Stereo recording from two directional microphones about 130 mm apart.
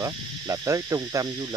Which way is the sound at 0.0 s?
25° right (ahead or behind).